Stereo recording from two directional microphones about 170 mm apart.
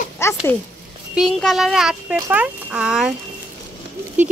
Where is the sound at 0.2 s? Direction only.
15° left (ahead or behind).